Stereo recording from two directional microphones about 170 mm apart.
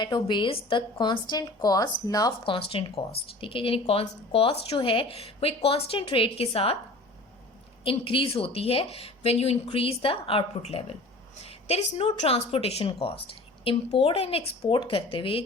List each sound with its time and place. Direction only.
0.0 s speech: 25° left (ahead or behind)
2.4 s a woman's voice: 30° left (ahead or behind)
7.9 s a woman's voice: 30° left (ahead or behind)